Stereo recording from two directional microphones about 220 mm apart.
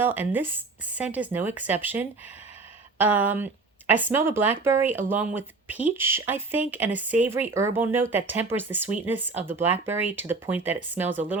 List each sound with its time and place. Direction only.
0.0 s speech: 10° right (ahead or behind)